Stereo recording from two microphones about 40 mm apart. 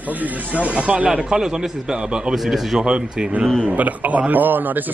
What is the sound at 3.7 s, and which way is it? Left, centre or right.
A man's voice, right.